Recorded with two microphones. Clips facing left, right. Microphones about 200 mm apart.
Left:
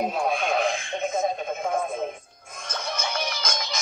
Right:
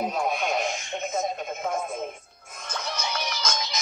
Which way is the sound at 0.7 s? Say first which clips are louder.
Left 4 dB; 90° left.